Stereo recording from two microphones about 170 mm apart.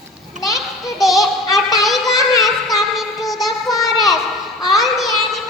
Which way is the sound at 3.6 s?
20° left (ahead or behind).